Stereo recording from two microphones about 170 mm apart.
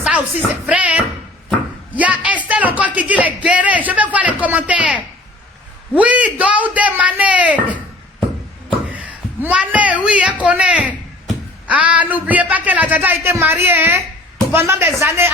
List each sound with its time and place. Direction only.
0.0 s music: 10° right (ahead or behind)
0.7 s a sound: 5° right (ahead or behind)
2.0 s speech: 10° right (ahead or behind)
8.9 s speech: 10° right (ahead or behind)